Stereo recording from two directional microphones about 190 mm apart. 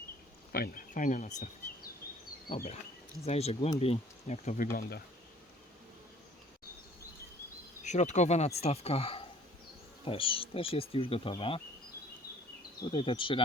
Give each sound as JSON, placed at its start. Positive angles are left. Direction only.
{"t": 0.5, "sound": "speech", "side_deg": 50}
{"t": 3.2, "sound": "speech", "side_deg": 35}
{"t": 7.9, "sound": "speech", "side_deg": 40}
{"t": 10.0, "sound": "bee", "side_deg": 30}
{"t": 12.8, "sound": "bee", "side_deg": 25}